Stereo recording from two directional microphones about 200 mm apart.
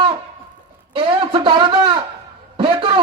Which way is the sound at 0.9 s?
25° right (ahead or behind).